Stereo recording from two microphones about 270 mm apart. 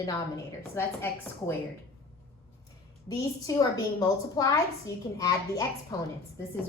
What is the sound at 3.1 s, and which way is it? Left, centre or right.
A woman's voice, centre.